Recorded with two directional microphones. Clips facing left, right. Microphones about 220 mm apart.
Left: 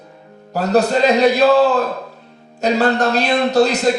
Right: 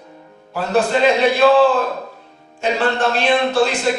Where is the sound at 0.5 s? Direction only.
40° left (ahead or behind).